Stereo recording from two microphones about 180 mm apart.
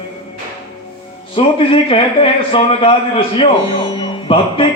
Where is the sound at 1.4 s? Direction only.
30° left (ahead or behind).